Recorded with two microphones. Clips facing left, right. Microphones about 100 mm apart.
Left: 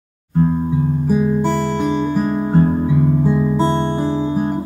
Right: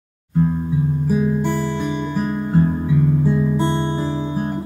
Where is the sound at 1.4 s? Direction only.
70° left (ahead or behind).